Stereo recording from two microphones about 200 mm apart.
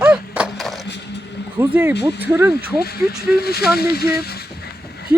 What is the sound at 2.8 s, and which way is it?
Speech, 50° left (ahead or behind).